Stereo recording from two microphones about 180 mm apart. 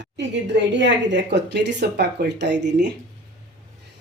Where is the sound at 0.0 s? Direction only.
80° right.